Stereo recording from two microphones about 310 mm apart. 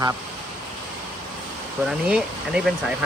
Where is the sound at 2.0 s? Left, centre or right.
Centre.